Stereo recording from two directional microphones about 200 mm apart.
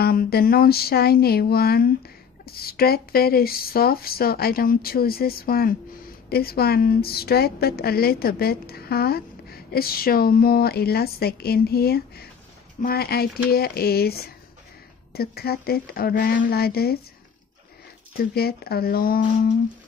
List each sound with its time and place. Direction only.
0.0 s a woman's voice: 50° left (ahead or behind)
18.1 s a woman's voice: 50° left (ahead or behind)